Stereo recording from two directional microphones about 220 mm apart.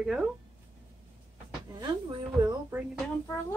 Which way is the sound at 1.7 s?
20° right (ahead or behind).